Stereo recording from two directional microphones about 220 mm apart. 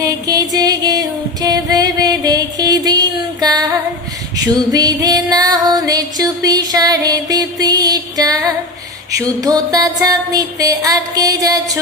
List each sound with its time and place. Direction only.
0.0 s music: 15° right (ahead or behind)
4.4 s female singing: 15° right (ahead or behind)
9.1 s music: 15° right (ahead or behind)